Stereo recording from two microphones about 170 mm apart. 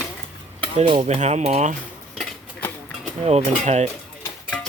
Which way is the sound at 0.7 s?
30° right (ahead or behind).